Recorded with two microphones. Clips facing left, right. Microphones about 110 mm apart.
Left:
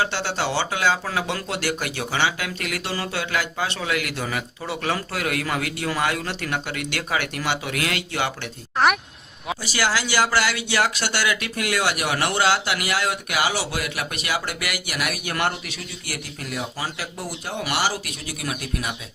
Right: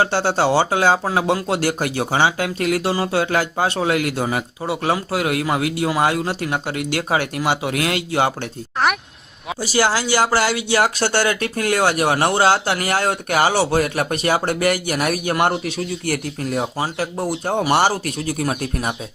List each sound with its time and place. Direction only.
0.0 s speech: 40° right (ahead or behind)
8.8 s speech: centre (ahead or behind)
9.6 s speech: 30° right (ahead or behind)